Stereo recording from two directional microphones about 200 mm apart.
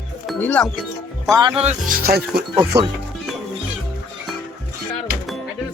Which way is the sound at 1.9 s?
50° right (ahead or behind).